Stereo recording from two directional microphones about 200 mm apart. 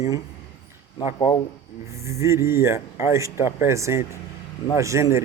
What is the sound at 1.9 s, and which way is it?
Speech, 15° right (ahead or behind).